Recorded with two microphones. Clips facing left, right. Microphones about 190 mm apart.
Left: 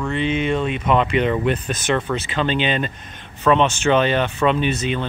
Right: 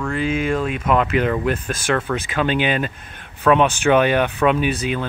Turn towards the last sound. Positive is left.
turn(degrees=-10)  # may be behind; listen again after turning